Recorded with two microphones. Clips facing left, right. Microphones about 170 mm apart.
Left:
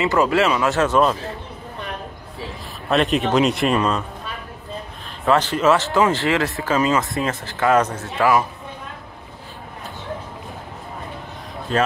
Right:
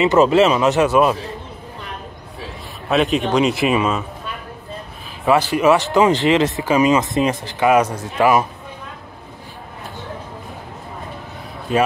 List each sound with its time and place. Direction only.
0.0 s speech: 20° right (ahead or behind)
2.9 s a man's voice: centre (ahead or behind)
5.2 s speech: 10° right (ahead or behind)
11.7 s speech: 10° right (ahead or behind)